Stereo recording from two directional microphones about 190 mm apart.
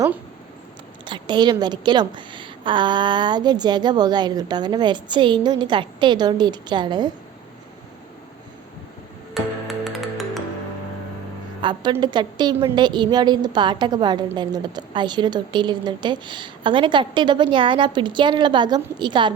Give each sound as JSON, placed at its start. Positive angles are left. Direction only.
{"t": 1.0, "sound": "a woman's voice", "side_deg": -25}
{"t": 9.3, "sound": "music", "side_deg": 0}
{"t": 11.6, "sound": "a woman's voice", "side_deg": -25}